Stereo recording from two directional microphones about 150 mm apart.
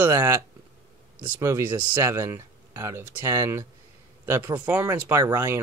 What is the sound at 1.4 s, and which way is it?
Speech, 20° right (ahead or behind).